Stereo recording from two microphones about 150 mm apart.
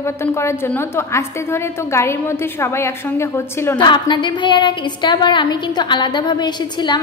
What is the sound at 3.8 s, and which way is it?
A woman's voice, 30° left (ahead or behind).